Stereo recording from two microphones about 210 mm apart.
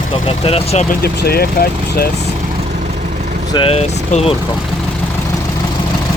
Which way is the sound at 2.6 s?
35° right (ahead or behind).